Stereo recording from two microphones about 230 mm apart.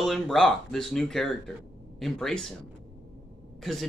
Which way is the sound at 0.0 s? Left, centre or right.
Centre.